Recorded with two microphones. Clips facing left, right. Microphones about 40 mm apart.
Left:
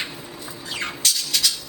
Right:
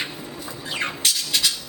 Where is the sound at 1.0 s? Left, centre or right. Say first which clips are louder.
Left 2 dB; right.